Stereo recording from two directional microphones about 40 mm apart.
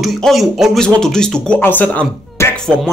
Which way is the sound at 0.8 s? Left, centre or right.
Centre.